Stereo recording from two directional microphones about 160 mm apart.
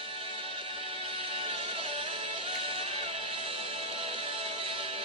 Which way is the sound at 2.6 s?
35° right (ahead or behind).